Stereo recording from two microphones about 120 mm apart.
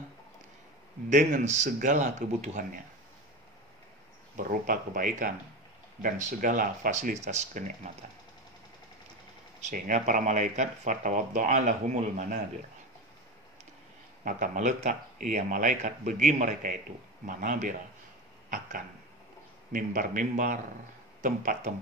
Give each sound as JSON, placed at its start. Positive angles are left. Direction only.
{"t": 1.1, "sound": "speech", "side_deg": -80}
{"t": 4.4, "sound": "speech", "side_deg": -90}
{"t": 9.6, "sound": "speech", "side_deg": -90}
{"t": 14.2, "sound": "speech", "side_deg": -90}
{"t": 19.7, "sound": "speech", "side_deg": -90}
{"t": 21.2, "sound": "speech", "side_deg": -80}